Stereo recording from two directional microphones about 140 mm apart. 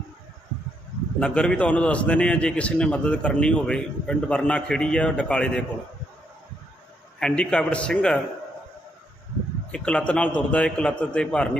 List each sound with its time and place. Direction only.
1.2 s a man's voice: 5° left (ahead or behind)
7.2 s a man's voice: 5° left (ahead or behind)
9.7 s a man's voice: 10° left (ahead or behind)